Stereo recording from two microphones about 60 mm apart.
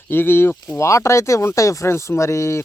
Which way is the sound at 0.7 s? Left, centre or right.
Left.